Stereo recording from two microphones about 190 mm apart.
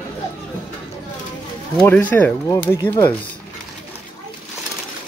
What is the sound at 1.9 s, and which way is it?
Speech, 10° left (ahead or behind).